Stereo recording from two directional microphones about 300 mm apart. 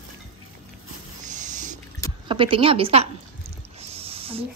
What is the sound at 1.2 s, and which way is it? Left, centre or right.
Owl, right.